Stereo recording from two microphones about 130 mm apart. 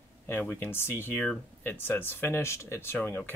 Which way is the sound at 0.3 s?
15° left (ahead or behind).